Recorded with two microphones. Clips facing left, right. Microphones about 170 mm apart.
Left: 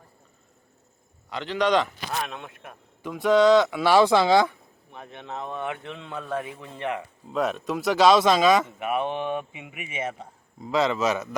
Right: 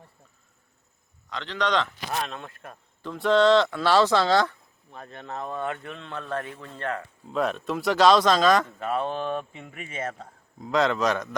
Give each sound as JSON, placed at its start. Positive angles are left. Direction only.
{"t": 1.3, "sound": "speech", "side_deg": 10}
{"t": 5.8, "sound": "speech", "side_deg": 5}
{"t": 7.3, "sound": "speech", "side_deg": 0}